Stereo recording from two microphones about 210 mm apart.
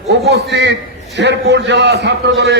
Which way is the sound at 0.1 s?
55° right (ahead or behind).